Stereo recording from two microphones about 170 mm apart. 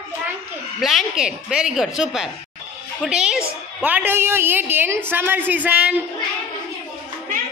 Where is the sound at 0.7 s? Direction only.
Centre (ahead or behind).